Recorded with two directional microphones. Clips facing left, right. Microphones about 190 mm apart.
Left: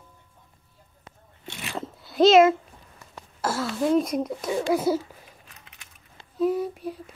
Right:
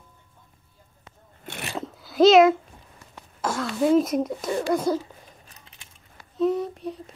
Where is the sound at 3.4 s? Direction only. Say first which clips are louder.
Right 2 dB; 5° left (ahead or behind).